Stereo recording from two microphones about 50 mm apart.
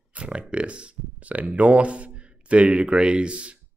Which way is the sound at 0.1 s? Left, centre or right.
Right.